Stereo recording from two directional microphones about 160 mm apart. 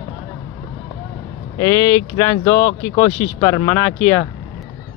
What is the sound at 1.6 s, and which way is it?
Speech, 20° left (ahead or behind).